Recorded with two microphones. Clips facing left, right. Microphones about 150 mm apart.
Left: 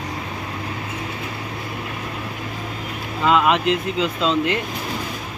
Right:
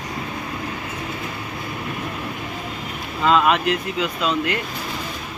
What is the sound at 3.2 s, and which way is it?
Speech, 15° left (ahead or behind).